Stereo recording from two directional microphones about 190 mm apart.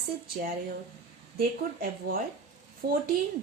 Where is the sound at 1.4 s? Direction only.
50° right (ahead or behind).